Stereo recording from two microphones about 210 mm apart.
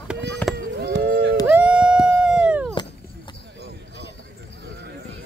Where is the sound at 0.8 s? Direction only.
55° right (ahead or behind).